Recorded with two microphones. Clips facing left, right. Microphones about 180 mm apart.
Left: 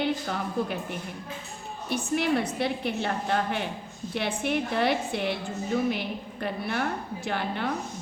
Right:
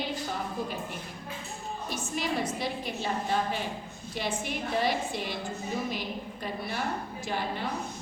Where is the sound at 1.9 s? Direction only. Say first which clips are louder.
Left 7 dB; 60° left (ahead or behind).